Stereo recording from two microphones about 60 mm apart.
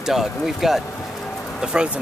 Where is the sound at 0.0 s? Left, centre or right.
Centre.